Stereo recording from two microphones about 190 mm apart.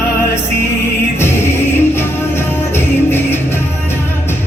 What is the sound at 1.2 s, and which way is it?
Music, 10° left (ahead or behind).